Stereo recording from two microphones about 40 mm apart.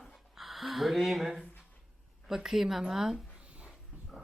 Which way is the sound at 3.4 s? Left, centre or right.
Right.